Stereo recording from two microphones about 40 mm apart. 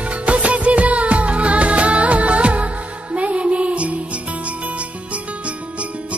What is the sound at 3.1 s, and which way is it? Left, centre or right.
Music, right.